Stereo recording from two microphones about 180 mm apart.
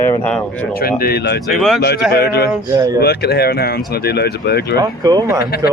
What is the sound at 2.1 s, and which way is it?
Speech, 65° left (ahead or behind).